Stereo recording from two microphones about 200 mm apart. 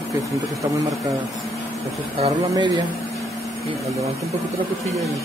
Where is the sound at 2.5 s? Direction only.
20° right (ahead or behind).